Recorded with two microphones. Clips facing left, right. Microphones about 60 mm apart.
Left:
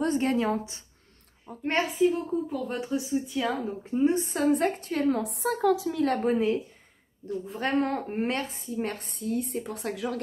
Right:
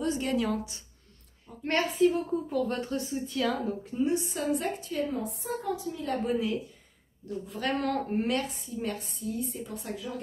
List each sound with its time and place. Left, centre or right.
0.0 s a woman's voice: left
2.0 s speech: centre
3.8 s a woman's voice: left
4.6 s a woman's voice: left
6.2 s a woman's voice: left
7.4 s a woman's voice: left